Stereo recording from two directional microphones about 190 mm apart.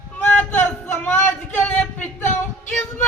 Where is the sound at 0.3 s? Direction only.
10° left (ahead or behind).